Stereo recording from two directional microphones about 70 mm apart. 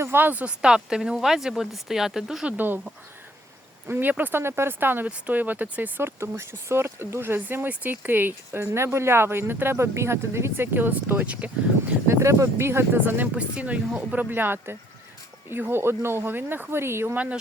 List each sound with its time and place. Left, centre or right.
0.0 s speech: right
0.6 s speech: centre
2.5 s speech: right
3.8 s speech: right
6.0 s speech: right; by 11.9 s centre
12.0 s speech: right
13.3 s speech: centre; by 17.2 s right